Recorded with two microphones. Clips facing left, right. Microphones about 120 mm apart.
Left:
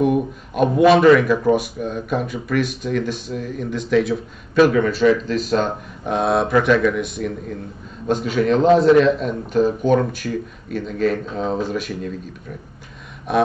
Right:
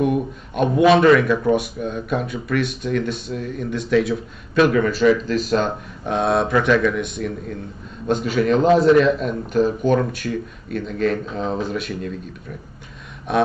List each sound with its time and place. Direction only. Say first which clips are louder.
0.0 s speech: left 2 dB; centre (ahead or behind)
13.3 s speech: left 1 dB; centre (ahead or behind)